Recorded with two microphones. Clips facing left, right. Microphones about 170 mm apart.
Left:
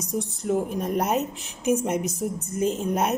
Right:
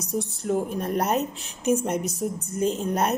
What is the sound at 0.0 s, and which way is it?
A woman's voice, 15° left (ahead or behind).